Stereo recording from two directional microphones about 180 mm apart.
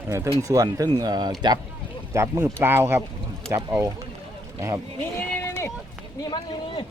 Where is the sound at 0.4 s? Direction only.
20° right (ahead or behind).